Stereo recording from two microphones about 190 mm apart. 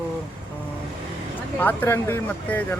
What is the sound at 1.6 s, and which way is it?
Speech, 10° left (ahead or behind).